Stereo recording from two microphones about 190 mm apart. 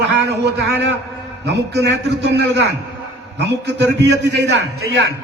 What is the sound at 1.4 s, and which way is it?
A man's voice, 60° right (ahead or behind).